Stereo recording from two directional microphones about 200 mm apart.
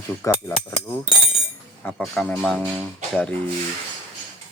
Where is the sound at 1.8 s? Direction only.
5° left (ahead or behind).